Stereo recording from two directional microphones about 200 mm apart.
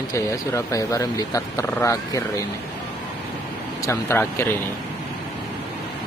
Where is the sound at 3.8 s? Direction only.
10° left (ahead or behind).